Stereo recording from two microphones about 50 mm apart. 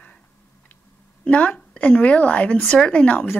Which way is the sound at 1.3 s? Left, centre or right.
Left.